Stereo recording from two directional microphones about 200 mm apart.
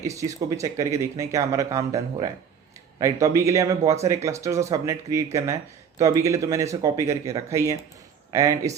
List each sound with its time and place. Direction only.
0.0 s speech: 15° right (ahead or behind)